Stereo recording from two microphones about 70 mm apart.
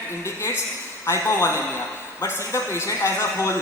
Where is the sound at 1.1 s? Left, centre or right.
Left.